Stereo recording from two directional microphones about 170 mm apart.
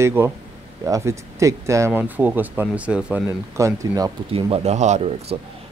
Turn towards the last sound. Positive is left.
turn(degrees=-40)  # may be behind; listen again after turning